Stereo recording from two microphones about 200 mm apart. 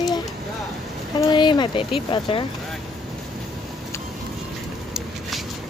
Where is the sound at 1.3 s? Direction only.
20° left (ahead or behind).